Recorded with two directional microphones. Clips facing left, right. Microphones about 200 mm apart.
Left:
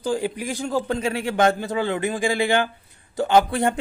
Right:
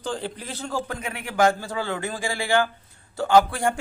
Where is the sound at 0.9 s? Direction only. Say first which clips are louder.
Left 9 dB; 25° left (ahead or behind).